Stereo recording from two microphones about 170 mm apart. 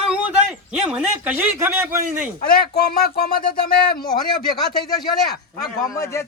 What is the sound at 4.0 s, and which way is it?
Speech, 25° left (ahead or behind).